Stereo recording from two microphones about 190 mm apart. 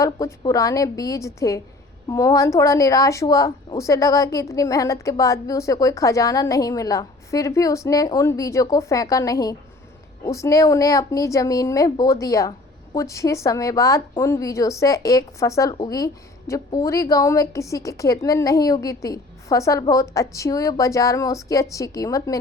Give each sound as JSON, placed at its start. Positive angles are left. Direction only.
{"t": 0.0, "sound": "a woman's voice", "side_deg": 15}